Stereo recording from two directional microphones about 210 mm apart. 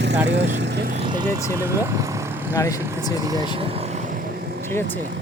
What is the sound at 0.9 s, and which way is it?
Vehicle, 20° right (ahead or behind).